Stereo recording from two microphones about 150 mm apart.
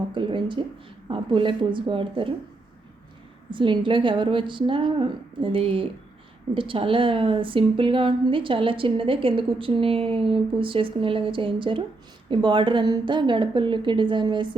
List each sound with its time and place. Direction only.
0.1 s a woman's voice: 35° right (ahead or behind)
3.5 s a woman's voice: 35° right (ahead or behind)